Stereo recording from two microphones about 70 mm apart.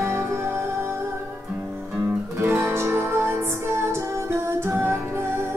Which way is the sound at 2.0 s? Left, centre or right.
Right.